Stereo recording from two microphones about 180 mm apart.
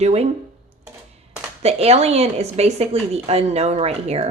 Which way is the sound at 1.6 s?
35° right (ahead or behind).